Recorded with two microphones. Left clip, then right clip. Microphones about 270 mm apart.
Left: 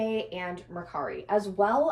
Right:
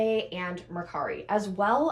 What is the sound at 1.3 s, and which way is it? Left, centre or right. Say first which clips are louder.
Speech: left 3 dB; right.